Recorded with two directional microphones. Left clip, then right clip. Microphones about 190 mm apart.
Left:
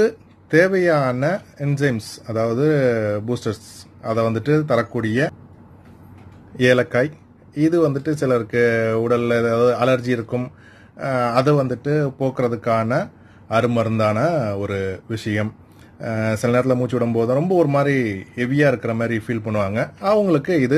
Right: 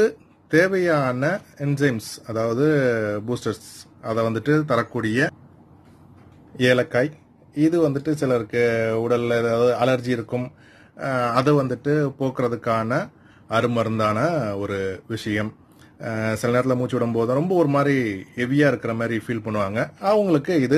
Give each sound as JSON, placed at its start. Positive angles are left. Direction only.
{"t": 0.0, "sound": "speech", "side_deg": 0}
{"t": 6.5, "sound": "speech", "side_deg": 0}